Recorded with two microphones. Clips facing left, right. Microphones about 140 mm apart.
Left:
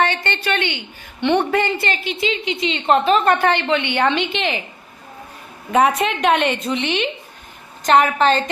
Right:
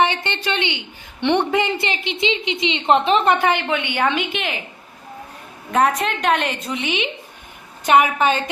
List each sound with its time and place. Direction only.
0.0 s a woman's voice: 15° right (ahead or behind)
6.0 s a woman's voice: centre (ahead or behind)